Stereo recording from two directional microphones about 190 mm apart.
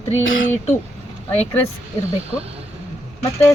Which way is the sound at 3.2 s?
15° left (ahead or behind).